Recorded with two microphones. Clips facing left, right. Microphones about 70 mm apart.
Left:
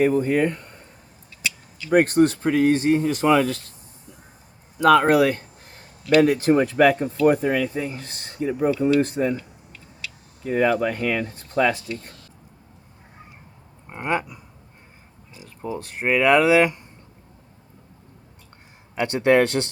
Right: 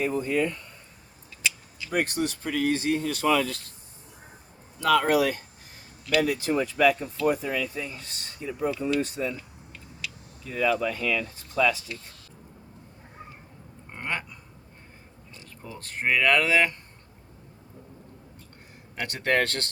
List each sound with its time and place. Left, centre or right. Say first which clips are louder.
0.0 s speech: left 7 dB; left
1.9 s speech: left 11 dB; left
4.8 s speech: left 6 dB; left
10.4 s speech: left 5 dB; left
13.9 s a sound: left 8 dB; centre
15.8 s speech: left 4 dB; centre
18.9 s speech: left 8 dB; left